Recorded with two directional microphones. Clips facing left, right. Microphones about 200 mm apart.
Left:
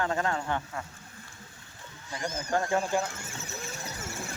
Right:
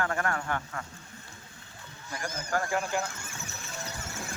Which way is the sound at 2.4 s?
25° left (ahead or behind).